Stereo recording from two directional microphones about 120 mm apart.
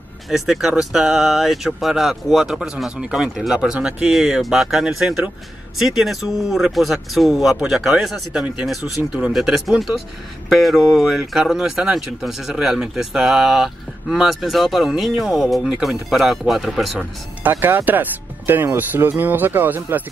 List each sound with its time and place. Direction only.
0.3 s speech: centre (ahead or behind)
17.4 s speech: 15° right (ahead or behind)